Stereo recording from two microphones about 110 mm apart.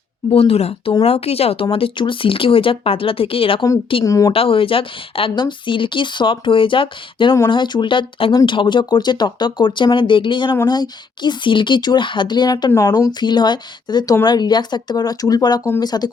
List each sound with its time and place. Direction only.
0.3 s speech: 60° left (ahead or behind)
1.7 s speech: 50° left (ahead or behind)
4.0 s speech: 30° left (ahead or behind)
4.3 s speech: 55° left (ahead or behind)
12.7 s speech: 30° left (ahead or behind)